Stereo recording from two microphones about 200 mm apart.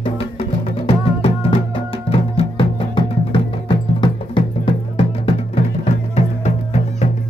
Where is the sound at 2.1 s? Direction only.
25° left (ahead or behind).